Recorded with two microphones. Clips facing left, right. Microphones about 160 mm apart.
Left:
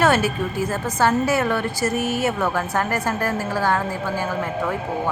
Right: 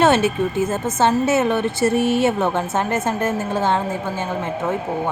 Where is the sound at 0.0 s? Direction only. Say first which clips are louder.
Right 3 dB; 25° right (ahead or behind).